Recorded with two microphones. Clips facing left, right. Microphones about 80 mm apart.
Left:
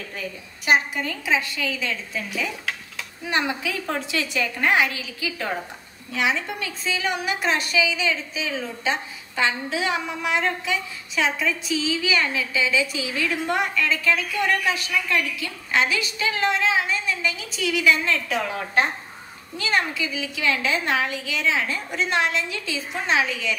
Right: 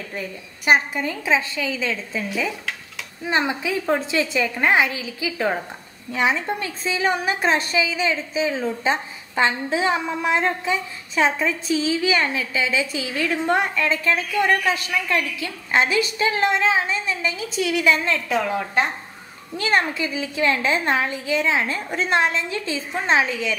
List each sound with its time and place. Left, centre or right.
0.1 s a woman's voice: right
6.1 s a woman's voice: right; by 18.7 s centre
19.5 s a woman's voice: right